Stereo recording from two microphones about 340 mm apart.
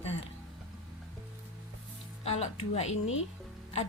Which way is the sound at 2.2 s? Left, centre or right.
Centre.